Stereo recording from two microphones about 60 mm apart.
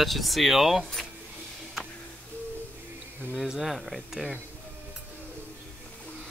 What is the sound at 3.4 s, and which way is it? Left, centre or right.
Speech, centre.